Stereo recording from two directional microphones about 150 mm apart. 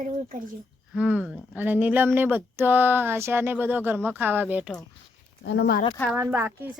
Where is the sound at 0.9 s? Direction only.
10° right (ahead or behind).